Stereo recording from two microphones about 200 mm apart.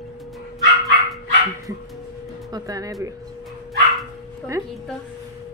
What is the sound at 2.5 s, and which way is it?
Speech, 15° right (ahead or behind).